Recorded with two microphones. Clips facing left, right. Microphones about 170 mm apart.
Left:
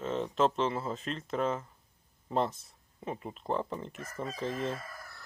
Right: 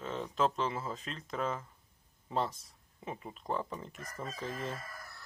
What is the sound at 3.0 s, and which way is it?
Speech, centre (ahead or behind).